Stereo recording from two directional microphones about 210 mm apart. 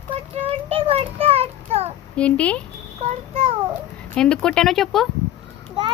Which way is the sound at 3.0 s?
30° right (ahead or behind).